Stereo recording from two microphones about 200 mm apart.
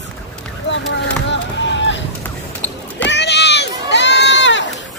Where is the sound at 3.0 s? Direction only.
60° left (ahead or behind).